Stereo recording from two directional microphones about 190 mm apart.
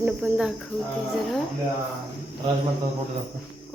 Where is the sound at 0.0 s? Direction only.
5° right (ahead or behind).